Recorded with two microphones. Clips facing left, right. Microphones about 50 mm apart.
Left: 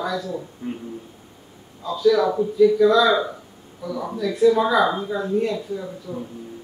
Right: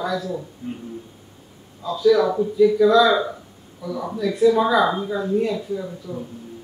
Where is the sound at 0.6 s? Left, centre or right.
Left.